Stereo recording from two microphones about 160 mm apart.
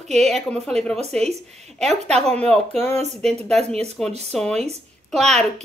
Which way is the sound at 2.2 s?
5° left (ahead or behind).